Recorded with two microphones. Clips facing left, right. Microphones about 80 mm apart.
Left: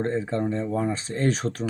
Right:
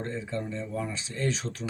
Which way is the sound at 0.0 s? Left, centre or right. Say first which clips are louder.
Left 8 dB; left.